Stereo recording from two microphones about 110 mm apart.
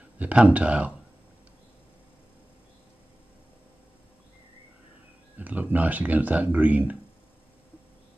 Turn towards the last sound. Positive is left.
turn(degrees=-15)  # may be behind; listen again after turning